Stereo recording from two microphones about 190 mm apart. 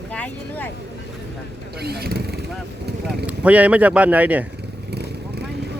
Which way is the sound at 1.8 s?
55° right (ahead or behind).